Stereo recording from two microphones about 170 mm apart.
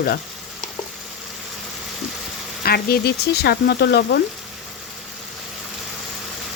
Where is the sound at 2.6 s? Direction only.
65° left (ahead or behind).